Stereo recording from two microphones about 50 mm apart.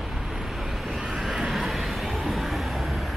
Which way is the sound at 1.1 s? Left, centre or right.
Centre.